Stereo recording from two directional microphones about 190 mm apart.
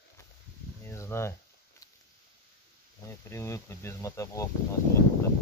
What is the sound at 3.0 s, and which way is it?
Speech, 15° left (ahead or behind).